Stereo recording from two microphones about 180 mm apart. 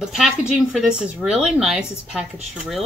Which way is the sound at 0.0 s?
5° right (ahead or behind).